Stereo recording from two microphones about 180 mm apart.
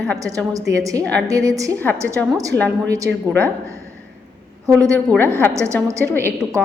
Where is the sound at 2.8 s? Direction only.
15° right (ahead or behind).